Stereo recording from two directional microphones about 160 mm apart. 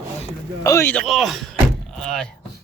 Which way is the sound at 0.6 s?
20° left (ahead or behind).